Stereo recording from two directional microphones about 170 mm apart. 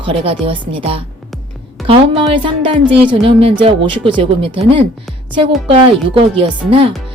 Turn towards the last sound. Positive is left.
turn(degrees=-30)  # may be behind; listen again after turning